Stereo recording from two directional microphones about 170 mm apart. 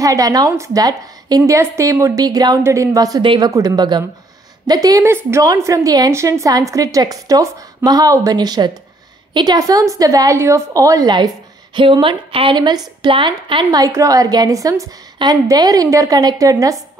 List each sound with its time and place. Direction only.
0.0 s a woman's voice: 20° right (ahead or behind)